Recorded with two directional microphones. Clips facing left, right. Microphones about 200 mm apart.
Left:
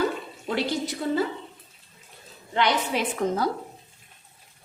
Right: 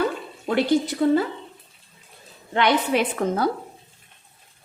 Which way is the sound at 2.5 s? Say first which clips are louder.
Right 4 dB; 60° right (ahead or behind).